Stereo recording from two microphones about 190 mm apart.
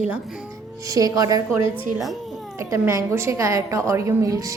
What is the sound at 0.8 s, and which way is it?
Speech, 20° right (ahead or behind).